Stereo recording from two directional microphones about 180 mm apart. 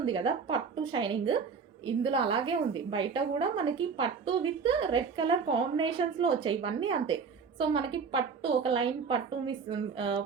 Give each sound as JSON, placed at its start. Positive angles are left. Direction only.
{"t": 0.0, "sound": "a woman's voice", "side_deg": -30}